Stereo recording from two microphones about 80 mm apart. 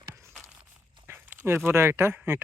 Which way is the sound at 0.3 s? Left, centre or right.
Centre.